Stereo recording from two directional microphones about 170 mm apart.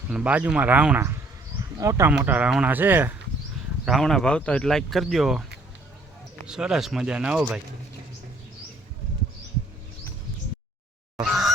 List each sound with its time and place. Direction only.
0.1 s speech: 5° right (ahead or behind)
3.8 s speech: centre (ahead or behind)
6.5 s speech: 5° right (ahead or behind)
11.2 s a sound: centre (ahead or behind)